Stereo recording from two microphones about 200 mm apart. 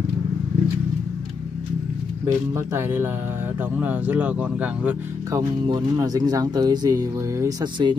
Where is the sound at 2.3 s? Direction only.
15° right (ahead or behind).